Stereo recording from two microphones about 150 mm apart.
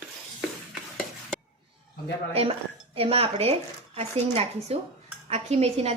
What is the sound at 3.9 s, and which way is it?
Dishes, 45° right (ahead or behind).